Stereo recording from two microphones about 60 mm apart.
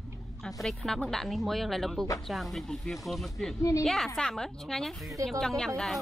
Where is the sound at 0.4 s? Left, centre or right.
Centre.